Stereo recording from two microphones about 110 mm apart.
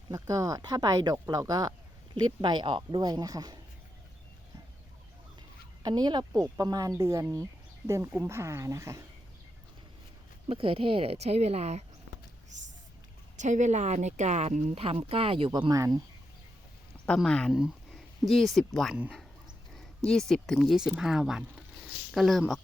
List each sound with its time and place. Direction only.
0.1 s speech: 30° right (ahead or behind); by 3.1 s 50° right (ahead or behind)
3.1 s speech: 35° right (ahead or behind)
5.8 s speech: 40° right (ahead or behind)
10.5 s speech: 55° right (ahead or behind); by 11.9 s 80° right
12.5 s speech: 90° right; by 15.7 s 45° right (ahead or behind)
15.7 s speech: 30° right (ahead or behind)
17.2 s speech: 10° left (ahead or behind)
17.5 s speech: 5° right (ahead or behind)